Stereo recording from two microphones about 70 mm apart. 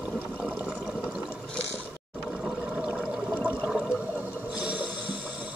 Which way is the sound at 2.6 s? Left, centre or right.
Centre.